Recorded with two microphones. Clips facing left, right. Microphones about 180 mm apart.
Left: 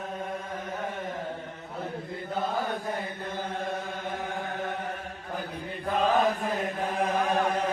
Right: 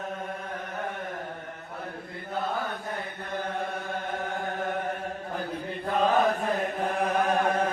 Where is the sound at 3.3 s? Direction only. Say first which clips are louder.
Right 2 dB; 60° right (ahead or behind).